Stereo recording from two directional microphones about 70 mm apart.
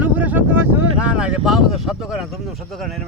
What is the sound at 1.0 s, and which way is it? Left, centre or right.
Speech, centre.